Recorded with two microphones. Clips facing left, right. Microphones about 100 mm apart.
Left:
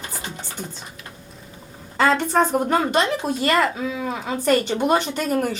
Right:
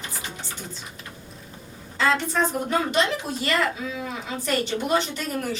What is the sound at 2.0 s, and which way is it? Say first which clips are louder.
Speech: left 5 dB; 50° left (ahead or behind).